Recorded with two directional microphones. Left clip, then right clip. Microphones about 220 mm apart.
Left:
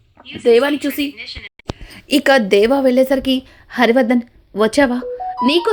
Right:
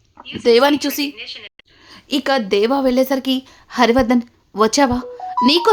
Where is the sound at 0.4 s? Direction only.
10° right (ahead or behind).